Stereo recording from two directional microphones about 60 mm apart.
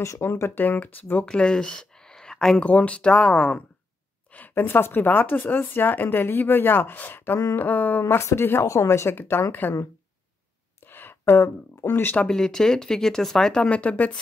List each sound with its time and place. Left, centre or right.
0.0 s speech: left
0.3 s speech: left
1.2 s speech: centre
2.6 s speech: left
4.3 s speech: left
8.2 s speech: left
9.1 s speech: left
10.9 s a sound: left
12.2 s speech: centre
13.7 s speech: left